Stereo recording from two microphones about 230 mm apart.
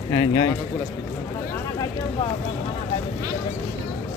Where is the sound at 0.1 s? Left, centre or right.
Centre.